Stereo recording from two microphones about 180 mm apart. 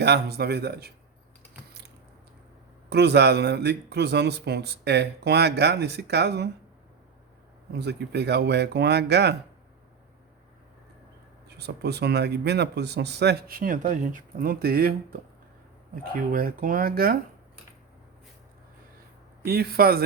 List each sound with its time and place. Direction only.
0.0 s speech: 65° right (ahead or behind)
2.9 s speech: 65° right (ahead or behind)
7.7 s speech: 65° right (ahead or behind)
11.4 s speech: 65° right (ahead or behind)
19.5 s speech: 60° right (ahead or behind)